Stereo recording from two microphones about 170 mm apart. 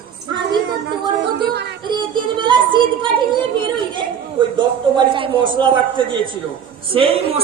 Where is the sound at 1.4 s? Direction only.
75° right (ahead or behind).